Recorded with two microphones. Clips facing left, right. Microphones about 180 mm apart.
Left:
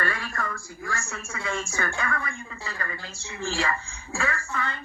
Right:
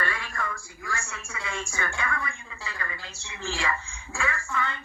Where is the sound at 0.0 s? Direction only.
45° left (ahead or behind).